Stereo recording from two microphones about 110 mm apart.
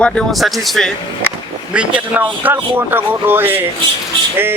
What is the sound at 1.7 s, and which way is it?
A man's voice, 10° right (ahead or behind).